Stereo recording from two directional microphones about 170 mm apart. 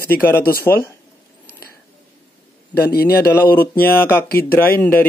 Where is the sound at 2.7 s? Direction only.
65° left (ahead or behind).